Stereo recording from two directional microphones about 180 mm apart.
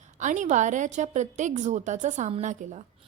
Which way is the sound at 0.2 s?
45° right (ahead or behind).